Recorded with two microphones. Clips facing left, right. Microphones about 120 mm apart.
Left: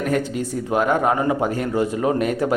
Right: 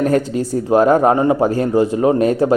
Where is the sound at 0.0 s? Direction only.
35° right (ahead or behind).